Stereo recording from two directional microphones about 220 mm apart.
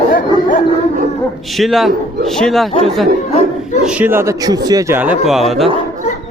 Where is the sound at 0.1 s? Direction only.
40° left (ahead or behind).